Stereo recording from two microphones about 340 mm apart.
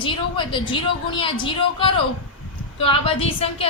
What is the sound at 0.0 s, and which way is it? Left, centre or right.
A woman's voice, centre.